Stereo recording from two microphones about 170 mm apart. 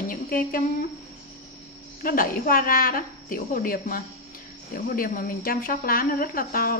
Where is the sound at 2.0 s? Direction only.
55° left (ahead or behind).